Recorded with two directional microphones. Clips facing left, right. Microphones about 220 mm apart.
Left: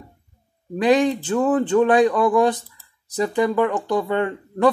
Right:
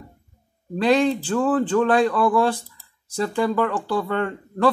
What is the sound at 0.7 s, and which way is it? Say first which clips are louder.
Speech: left 1 dB; 15° left (ahead or behind).